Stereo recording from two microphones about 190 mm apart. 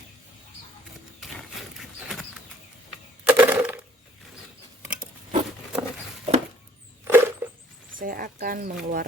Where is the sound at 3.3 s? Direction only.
10° right (ahead or behind).